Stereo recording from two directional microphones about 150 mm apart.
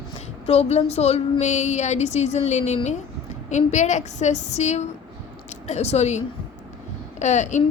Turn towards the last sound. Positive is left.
turn(degrees=50)  # may be behind; listen again after turning